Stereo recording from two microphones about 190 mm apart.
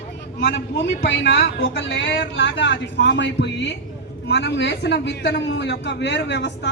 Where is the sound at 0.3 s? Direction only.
70° left (ahead or behind).